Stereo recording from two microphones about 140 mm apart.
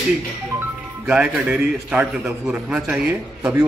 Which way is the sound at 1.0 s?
10° right (ahead or behind).